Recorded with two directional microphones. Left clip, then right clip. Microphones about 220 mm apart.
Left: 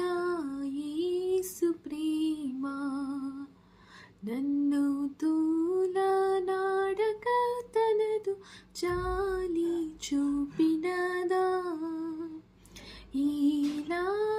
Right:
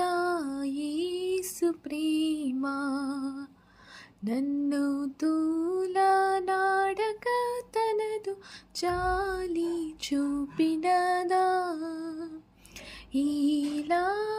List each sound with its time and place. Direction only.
0.0 s female singing: 30° right (ahead or behind)
4.2 s a sound: 25° right (ahead or behind)
8.7 s music: 25° right (ahead or behind)